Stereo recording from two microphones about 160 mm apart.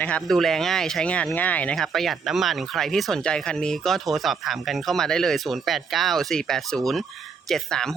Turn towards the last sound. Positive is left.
turn(degrees=5)  # may be behind; listen again after turning